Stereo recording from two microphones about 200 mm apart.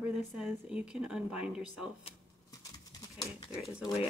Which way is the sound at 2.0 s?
20° left (ahead or behind).